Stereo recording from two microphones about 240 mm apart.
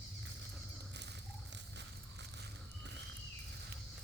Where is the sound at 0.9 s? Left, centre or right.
Right.